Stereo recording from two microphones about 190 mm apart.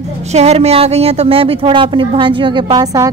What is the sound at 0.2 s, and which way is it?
Speech, 35° right (ahead or behind).